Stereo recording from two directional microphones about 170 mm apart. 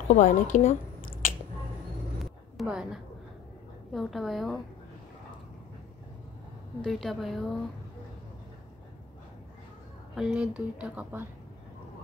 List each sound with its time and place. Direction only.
0.1 s speech: 45° left (ahead or behind)
2.5 s a woman's voice: 5° right (ahead or behind)
6.8 s a woman's voice: centre (ahead or behind)
10.1 s speech: 5° right (ahead or behind)